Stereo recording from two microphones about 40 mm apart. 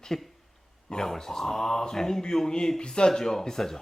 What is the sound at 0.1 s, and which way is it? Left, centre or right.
A man's voice, centre.